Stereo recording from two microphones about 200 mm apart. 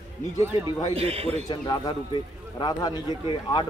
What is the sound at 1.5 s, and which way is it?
Speech, 20° left (ahead or behind).